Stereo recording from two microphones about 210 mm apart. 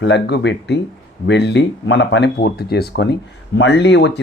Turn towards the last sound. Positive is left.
turn(degrees=55)  # may be behind; listen again after turning